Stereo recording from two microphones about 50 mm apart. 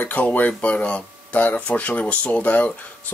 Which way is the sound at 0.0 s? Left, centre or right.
Left.